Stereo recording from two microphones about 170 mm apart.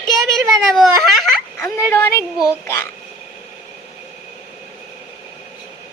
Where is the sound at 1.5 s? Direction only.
15° left (ahead or behind).